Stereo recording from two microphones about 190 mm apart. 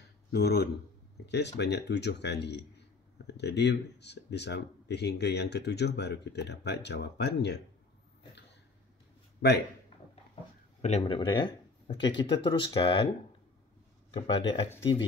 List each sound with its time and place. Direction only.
0.3 s speech: 55° left (ahead or behind)
9.4 s speech: 60° left (ahead or behind)
10.8 s speech: 35° left (ahead or behind)
14.1 s speech: 30° left (ahead or behind)